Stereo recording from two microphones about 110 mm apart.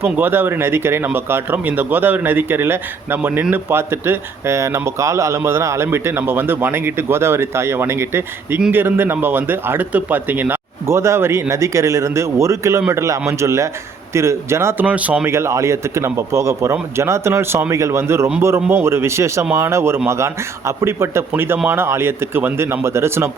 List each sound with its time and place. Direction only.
0.0 s speech: 20° right (ahead or behind)
14.8 s speech: 10° right (ahead or behind)
15.3 s speech: 25° right (ahead or behind)